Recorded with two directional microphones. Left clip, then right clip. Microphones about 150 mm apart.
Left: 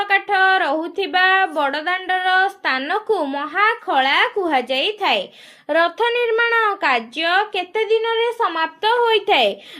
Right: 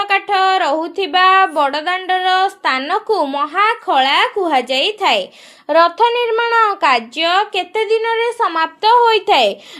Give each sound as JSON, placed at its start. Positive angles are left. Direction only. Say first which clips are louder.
{"t": 0.0, "sound": "speech", "louder": "right 2 dB", "side_deg": -35}
{"t": 5.6, "sound": "speech", "louder": "right 6 dB", "side_deg": -20}